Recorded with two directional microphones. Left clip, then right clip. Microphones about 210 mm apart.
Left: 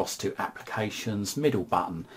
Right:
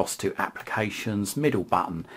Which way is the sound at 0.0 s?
25° right (ahead or behind).